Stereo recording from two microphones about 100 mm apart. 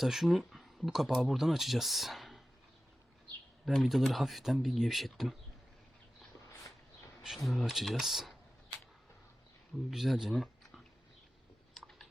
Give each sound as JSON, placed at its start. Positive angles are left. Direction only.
{"t": 0.0, "sound": "speech", "side_deg": -5}
{"t": 3.7, "sound": "speech", "side_deg": 0}
{"t": 7.2, "sound": "speech", "side_deg": 0}
{"t": 9.9, "sound": "speech", "side_deg": -5}
{"t": 11.7, "sound": "a sound", "side_deg": 0}